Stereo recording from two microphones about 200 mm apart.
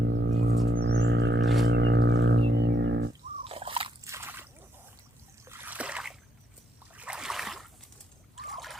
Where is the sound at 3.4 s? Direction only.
30° right (ahead or behind).